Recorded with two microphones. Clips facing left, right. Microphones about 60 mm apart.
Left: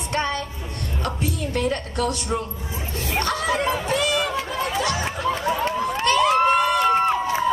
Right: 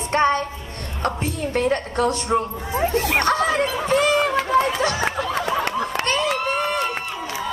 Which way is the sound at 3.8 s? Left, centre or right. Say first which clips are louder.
Right 4 dB; right.